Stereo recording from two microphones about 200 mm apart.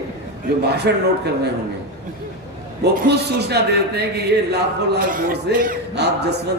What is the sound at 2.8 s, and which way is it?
A man's voice, 55° right (ahead or behind).